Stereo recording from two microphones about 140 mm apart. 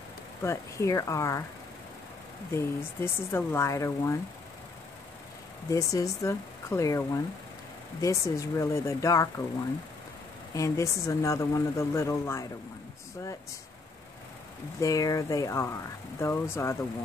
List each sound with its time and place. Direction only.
0.4 s a woman's voice: 20° left (ahead or behind)
2.5 s a woman's voice: 15° left (ahead or behind)
5.7 s a woman's voice: 25° left (ahead or behind)
10.5 s a woman's voice: 20° left (ahead or behind)
14.8 s a woman's voice: 25° left (ahead or behind)